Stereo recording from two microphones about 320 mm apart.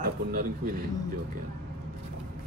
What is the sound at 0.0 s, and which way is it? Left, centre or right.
Speech, right.